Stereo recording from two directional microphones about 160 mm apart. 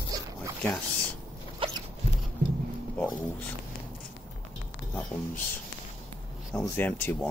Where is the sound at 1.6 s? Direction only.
35° right (ahead or behind).